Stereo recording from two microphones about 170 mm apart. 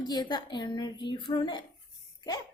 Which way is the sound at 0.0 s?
25° left (ahead or behind).